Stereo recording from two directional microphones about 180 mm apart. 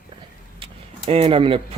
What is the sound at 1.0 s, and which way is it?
Speech, 30° right (ahead or behind).